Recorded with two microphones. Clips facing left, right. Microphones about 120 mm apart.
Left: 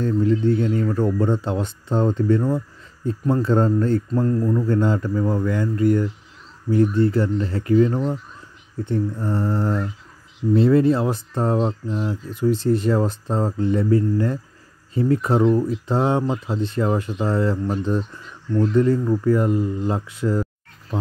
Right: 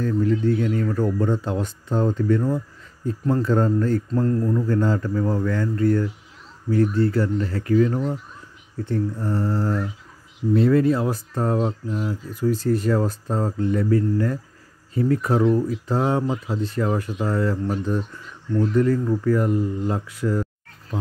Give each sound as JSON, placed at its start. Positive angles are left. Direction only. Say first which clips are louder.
{"t": 0.0, "sound": "speech", "louder": "left 2 dB", "side_deg": 25}
{"t": 4.1, "sound": "speech", "louder": "left 1 dB", "side_deg": 10}
{"t": 18.8, "sound": "speech", "louder": "left 2 dB", "side_deg": 25}